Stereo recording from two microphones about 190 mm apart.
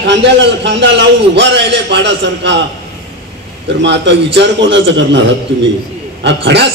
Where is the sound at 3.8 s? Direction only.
65° right (ahead or behind).